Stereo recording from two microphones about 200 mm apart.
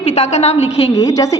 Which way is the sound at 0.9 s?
15° left (ahead or behind).